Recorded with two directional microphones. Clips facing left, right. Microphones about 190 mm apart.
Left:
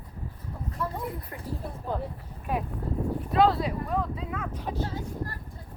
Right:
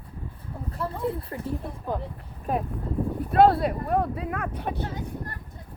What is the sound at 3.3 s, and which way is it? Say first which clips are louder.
Speech: right 4 dB; 60° right (ahead or behind).